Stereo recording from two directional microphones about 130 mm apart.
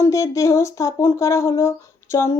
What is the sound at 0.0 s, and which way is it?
Speech, 25° left (ahead or behind).